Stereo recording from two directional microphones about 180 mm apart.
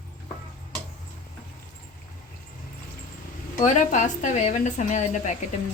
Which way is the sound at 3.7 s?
40° left (ahead or behind).